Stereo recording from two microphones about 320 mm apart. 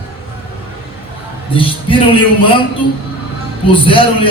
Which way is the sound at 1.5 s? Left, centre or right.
Centre.